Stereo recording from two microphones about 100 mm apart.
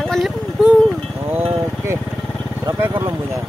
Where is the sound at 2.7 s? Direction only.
25° right (ahead or behind).